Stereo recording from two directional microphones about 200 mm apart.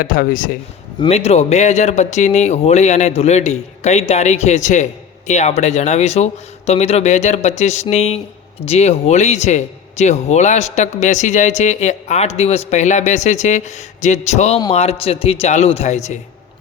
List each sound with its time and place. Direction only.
0.0 s a man's voice: 45° left (ahead or behind)
0.9 s speech: 30° left (ahead or behind)